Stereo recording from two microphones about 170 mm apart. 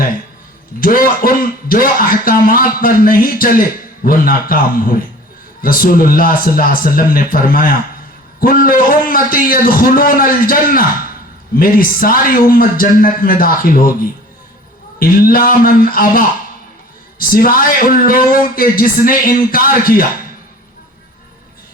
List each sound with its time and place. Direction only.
0.8 s speech: 55° left (ahead or behind)